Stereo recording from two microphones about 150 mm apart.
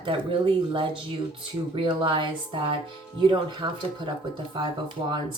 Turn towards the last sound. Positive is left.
turn(degrees=-30)  # may be behind; listen again after turning